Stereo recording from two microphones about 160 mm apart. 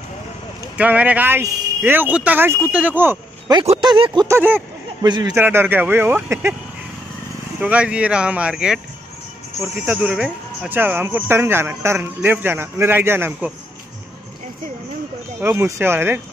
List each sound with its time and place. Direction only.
0.7 s speech: 10° right (ahead or behind)
3.6 s speech: 30° right (ahead or behind)
4.3 s speech: 10° right (ahead or behind)
5.0 s speech: 30° right (ahead or behind)
5.3 s speech: 15° right (ahead or behind)
7.6 s speech: 5° right (ahead or behind)
15.4 s speech: 15° right (ahead or behind)